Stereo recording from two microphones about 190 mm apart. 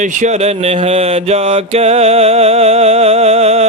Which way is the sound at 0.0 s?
40° right (ahead or behind).